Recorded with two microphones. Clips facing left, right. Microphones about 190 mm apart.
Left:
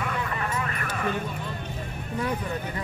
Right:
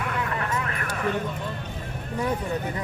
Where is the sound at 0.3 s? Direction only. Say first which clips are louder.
Right 1 dB; 65° right (ahead or behind).